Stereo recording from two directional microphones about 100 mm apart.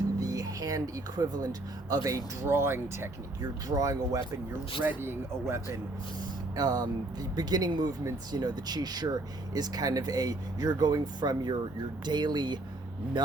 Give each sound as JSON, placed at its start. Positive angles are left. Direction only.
{"t": 0.2, "sound": "music", "side_deg": -35}
{"t": 2.0, "sound": "speech", "side_deg": -30}
{"t": 3.7, "sound": "speech", "side_deg": -35}
{"t": 4.8, "sound": "speech", "side_deg": -20}
{"t": 6.6, "sound": "speech", "side_deg": -40}